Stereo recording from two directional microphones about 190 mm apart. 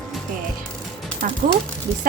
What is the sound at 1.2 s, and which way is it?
Speech, 45° right (ahead or behind).